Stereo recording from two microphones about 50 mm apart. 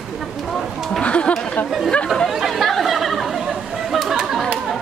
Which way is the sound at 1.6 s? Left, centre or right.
Left.